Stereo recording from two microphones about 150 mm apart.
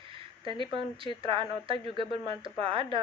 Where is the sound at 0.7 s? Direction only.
35° right (ahead or behind).